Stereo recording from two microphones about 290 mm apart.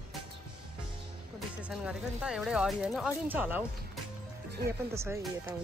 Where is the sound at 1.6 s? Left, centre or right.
Centre.